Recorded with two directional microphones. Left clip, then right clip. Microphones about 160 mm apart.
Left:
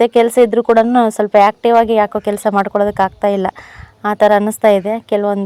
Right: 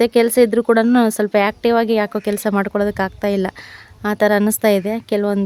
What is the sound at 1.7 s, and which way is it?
Speech, 35° right (ahead or behind).